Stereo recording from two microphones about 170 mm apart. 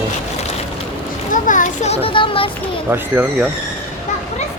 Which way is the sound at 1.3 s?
50° left (ahead or behind).